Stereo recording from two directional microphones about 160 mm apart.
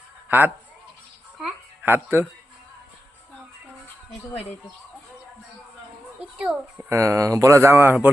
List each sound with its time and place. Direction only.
0.3 s a man's voice: 10° right (ahead or behind)
1.8 s a child's voice: 15° right (ahead or behind)
6.4 s a child's voice: 10° right (ahead or behind)